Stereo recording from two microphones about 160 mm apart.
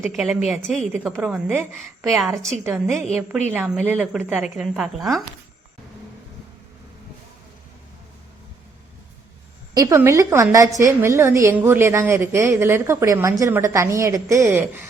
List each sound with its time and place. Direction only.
0.0 s a woman's voice: centre (ahead or behind)
9.7 s a woman's voice: 20° right (ahead or behind)